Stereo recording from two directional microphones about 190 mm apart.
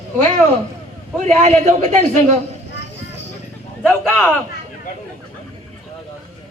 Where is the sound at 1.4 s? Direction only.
40° right (ahead or behind).